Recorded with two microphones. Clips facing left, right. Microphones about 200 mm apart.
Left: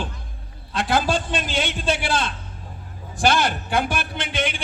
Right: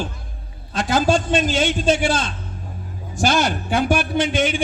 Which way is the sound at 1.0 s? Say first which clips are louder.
Right 6 dB; 45° right (ahead or behind).